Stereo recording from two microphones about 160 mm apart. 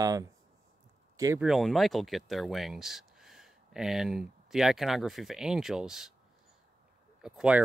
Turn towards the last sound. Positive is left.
turn(degrees=-5)  # may be behind; listen again after turning